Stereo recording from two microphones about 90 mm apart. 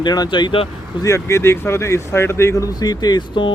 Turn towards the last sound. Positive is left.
turn(degrees=50)  # may be behind; listen again after turning